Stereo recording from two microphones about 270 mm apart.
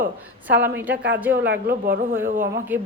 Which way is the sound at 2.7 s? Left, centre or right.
Centre.